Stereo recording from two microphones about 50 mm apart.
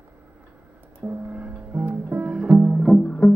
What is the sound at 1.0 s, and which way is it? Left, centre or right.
Music, right.